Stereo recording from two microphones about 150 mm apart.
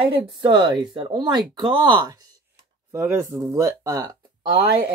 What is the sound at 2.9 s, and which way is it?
Speech, 15° right (ahead or behind).